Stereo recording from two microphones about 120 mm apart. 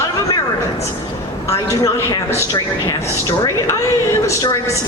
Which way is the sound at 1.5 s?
30° left (ahead or behind).